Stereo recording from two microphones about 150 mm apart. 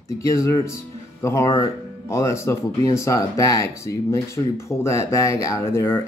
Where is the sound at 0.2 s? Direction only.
20° left (ahead or behind).